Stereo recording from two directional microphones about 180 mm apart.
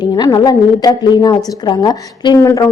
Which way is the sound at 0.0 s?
20° left (ahead or behind).